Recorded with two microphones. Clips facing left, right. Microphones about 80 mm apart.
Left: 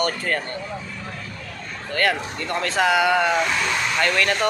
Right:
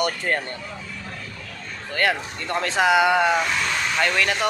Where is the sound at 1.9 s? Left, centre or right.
Centre.